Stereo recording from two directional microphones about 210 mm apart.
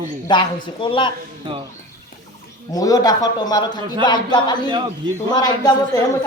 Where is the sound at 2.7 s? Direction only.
15° left (ahead or behind).